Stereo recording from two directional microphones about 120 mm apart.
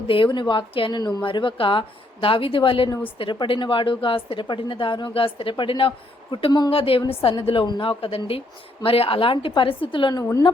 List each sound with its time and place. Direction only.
0.1 s a woman's voice: 45° left (ahead or behind)
6.7 s a woman's voice: 50° left (ahead or behind)